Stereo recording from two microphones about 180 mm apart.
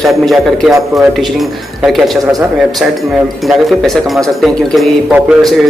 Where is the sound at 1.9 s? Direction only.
Centre (ahead or behind).